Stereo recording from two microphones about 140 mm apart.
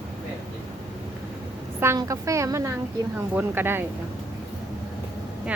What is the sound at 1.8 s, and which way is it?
A woman's voice, 20° right (ahead or behind).